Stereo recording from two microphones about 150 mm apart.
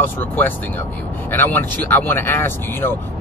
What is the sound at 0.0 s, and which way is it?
Speech, 15° left (ahead or behind).